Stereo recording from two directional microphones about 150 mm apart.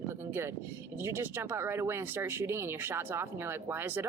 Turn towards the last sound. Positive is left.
turn(degrees=-15)  # may be behind; listen again after turning